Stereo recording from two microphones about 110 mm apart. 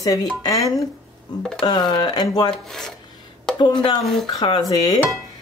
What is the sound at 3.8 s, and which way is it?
Speech, 45° left (ahead or behind).